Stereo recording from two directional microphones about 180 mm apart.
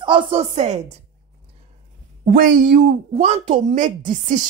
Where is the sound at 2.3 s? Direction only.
50° right (ahead or behind).